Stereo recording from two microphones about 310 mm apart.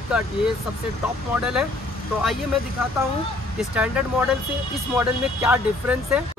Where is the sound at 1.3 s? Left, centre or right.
Centre.